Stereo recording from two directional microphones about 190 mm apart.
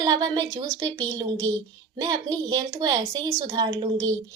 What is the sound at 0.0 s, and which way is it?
A woman's voice, 20° right (ahead or behind).